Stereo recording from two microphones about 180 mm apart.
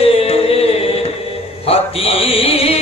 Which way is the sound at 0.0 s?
30° left (ahead or behind).